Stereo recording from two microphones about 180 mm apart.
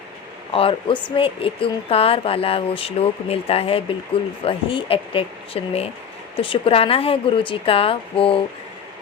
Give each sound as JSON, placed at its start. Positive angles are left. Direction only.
{"t": 0.5, "sound": "speech", "side_deg": 30}